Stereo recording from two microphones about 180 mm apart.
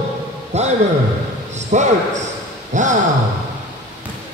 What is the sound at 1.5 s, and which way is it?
A man's voice, 40° right (ahead or behind).